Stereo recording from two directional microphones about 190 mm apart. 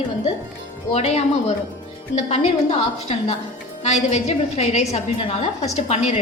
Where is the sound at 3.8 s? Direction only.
35° left (ahead or behind).